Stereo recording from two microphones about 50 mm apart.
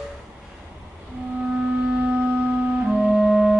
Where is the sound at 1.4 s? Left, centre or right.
Centre.